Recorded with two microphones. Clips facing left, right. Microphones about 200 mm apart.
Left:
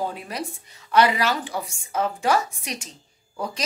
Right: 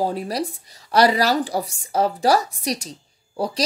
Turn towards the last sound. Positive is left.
turn(degrees=-35)  # may be behind; listen again after turning